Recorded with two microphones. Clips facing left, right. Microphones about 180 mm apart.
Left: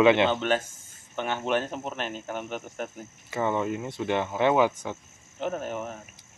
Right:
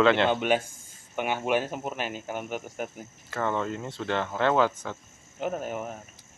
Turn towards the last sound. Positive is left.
turn(degrees=-5)  # may be behind; listen again after turning